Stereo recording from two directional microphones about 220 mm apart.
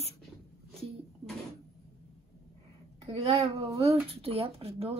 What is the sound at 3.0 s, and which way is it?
Speech, 25° right (ahead or behind).